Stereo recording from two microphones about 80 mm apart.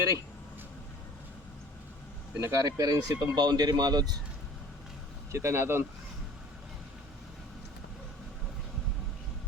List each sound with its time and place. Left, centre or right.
2.4 s speech: right
5.3 s speech: right